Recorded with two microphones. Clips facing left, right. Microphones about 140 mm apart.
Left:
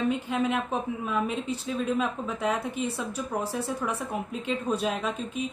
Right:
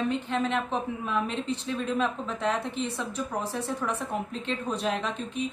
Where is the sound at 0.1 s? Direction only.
10° left (ahead or behind).